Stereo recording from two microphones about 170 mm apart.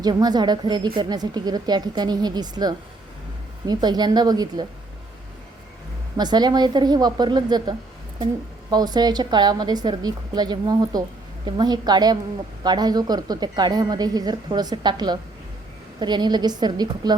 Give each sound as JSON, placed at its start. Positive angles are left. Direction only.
{"t": 0.0, "sound": "speech", "side_deg": -25}
{"t": 6.1, "sound": "speech", "side_deg": -25}